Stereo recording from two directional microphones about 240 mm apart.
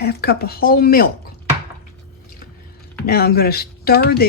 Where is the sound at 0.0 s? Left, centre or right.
Left.